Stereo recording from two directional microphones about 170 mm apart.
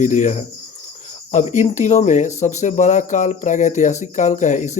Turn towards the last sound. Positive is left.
turn(degrees=45)  # may be behind; listen again after turning